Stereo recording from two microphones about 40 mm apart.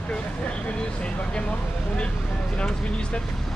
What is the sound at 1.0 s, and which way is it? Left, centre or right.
Speech, left.